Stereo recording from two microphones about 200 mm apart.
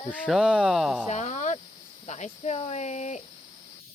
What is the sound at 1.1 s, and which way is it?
Cricket, 35° left (ahead or behind).